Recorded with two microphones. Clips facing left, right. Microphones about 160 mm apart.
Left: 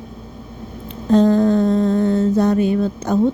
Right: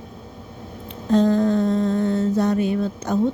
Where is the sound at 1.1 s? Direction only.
35° left (ahead or behind).